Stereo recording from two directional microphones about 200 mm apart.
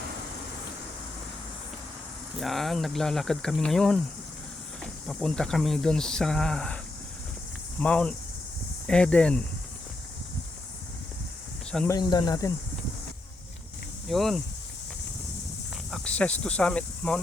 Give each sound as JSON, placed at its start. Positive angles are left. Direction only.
{"t": 2.4, "sound": "speech", "side_deg": 0}
{"t": 7.8, "sound": "speech", "side_deg": 5}
{"t": 11.9, "sound": "speech", "side_deg": 20}
{"t": 14.1, "sound": "speech", "side_deg": 0}
{"t": 15.9, "sound": "speech", "side_deg": 5}